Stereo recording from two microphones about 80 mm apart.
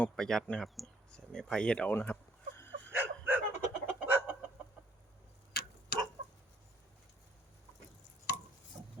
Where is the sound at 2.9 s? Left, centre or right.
Right.